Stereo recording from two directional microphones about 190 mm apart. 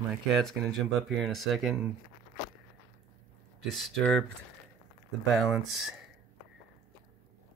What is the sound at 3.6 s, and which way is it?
Speech, centre (ahead or behind).